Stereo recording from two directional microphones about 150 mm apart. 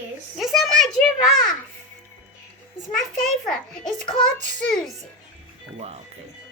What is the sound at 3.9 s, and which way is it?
Child singing, 50° right (ahead or behind).